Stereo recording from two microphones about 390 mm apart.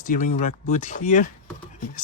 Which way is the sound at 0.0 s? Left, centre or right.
Centre.